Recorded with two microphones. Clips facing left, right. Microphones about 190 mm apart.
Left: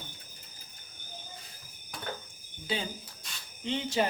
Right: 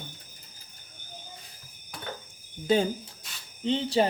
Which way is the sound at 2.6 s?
45° right (ahead or behind).